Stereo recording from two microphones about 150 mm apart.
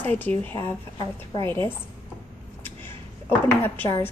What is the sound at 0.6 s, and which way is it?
Speech, 30° left (ahead or behind).